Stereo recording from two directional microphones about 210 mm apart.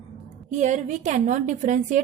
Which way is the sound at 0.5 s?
35° right (ahead or behind).